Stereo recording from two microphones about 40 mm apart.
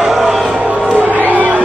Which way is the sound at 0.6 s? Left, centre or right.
Right.